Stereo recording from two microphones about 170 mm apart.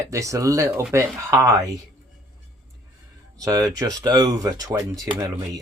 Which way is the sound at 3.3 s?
20° right (ahead or behind).